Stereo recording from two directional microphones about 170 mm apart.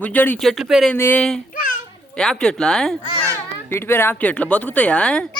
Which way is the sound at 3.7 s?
15° left (ahead or behind).